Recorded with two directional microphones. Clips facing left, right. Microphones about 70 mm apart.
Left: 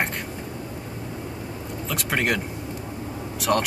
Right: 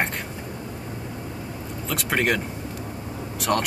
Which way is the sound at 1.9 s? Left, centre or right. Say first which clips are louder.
Right 1 dB; centre.